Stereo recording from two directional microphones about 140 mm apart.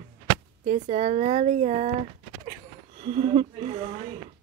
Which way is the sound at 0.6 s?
55° right (ahead or behind).